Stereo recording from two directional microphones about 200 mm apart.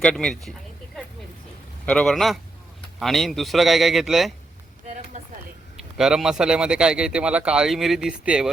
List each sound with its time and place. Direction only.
0.0 s speech: 5° left (ahead or behind)
1.9 s speech: centre (ahead or behind)
5.7 s speech: 5° right (ahead or behind)